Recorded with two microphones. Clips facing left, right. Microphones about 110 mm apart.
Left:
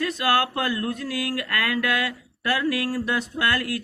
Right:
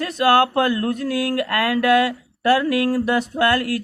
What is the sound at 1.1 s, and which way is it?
Speech, 30° right (ahead or behind).